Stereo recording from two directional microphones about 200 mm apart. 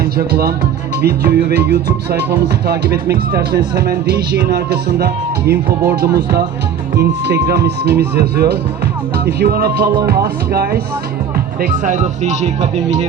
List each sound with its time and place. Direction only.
0.0 s speech: 50° right (ahead or behind)
6.9 s speech: 55° right (ahead or behind)
11.6 s speech: 40° right (ahead or behind)